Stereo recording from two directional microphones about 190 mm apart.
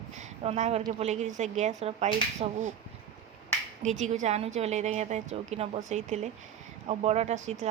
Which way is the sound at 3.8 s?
40° right (ahead or behind).